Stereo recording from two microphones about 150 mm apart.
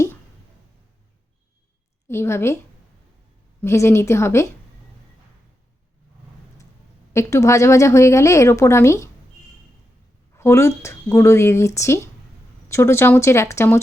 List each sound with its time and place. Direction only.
2.0 s speech: 15° left (ahead or behind)
3.6 s speech: 15° left (ahead or behind)
7.1 s a woman's voice: 20° left (ahead or behind)
10.3 s speech: 20° left (ahead or behind)